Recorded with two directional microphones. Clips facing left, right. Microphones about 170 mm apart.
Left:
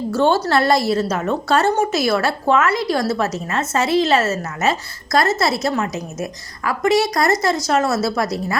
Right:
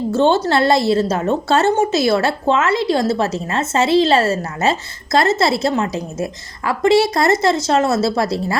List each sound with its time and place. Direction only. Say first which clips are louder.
0.1 s a woman's voice: right 1 dB; 25° right (ahead or behind)